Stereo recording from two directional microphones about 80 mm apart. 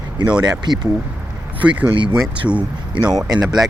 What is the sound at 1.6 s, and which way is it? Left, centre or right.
Speech, centre.